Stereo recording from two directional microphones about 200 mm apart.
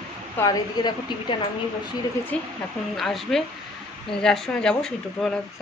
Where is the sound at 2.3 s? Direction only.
5° left (ahead or behind).